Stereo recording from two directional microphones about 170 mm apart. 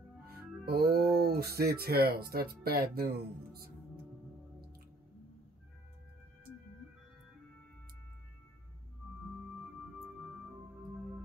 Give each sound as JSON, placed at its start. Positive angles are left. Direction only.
{"t": 0.3, "sound": "speech", "side_deg": -65}